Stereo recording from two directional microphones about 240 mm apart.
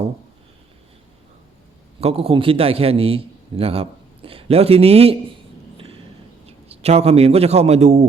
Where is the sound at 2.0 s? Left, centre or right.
Right.